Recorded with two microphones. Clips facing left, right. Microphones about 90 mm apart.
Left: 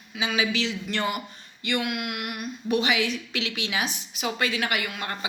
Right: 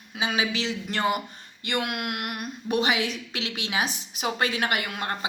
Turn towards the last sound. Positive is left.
turn(degrees=-35)  # may be behind; listen again after turning